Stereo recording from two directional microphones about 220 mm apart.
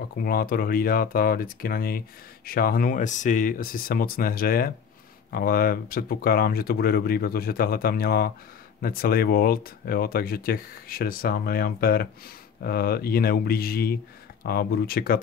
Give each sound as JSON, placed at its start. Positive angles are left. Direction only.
{"t": 0.2, "sound": "speech", "side_deg": 40}